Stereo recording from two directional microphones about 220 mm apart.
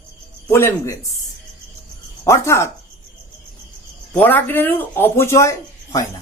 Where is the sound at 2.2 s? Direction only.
15° left (ahead or behind).